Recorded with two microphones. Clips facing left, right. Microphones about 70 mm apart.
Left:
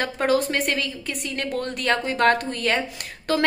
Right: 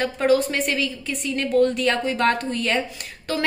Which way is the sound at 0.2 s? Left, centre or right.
Left.